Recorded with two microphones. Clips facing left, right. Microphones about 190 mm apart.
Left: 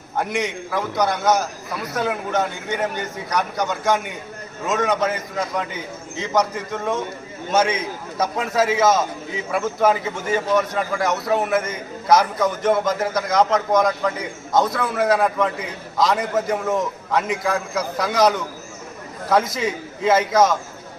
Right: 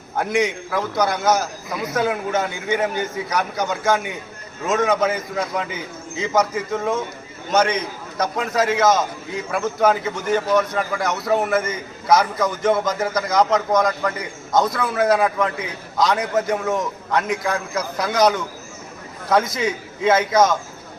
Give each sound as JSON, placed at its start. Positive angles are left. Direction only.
{"t": 0.2, "sound": "a man's voice", "side_deg": 0}